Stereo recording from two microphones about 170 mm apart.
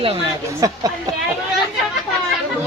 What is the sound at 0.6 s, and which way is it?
Speech, 20° right (ahead or behind).